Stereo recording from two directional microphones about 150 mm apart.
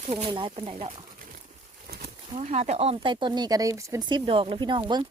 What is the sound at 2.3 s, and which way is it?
Speech, 50° right (ahead or behind).